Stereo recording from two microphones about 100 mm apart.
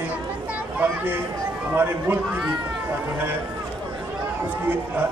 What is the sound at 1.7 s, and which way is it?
Speech, 20° right (ahead or behind).